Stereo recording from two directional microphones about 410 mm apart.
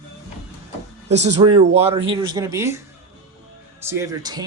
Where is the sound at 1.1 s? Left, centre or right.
Centre.